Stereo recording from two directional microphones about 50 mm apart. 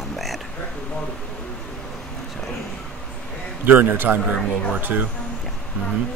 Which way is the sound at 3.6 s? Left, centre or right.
Right.